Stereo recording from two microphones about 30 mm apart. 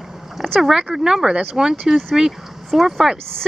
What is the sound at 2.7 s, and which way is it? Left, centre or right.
Speech, centre.